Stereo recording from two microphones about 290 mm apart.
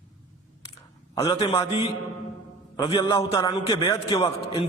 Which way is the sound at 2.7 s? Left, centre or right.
Centre.